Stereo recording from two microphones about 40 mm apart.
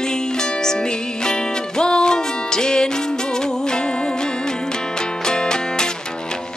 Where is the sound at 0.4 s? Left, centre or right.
Centre.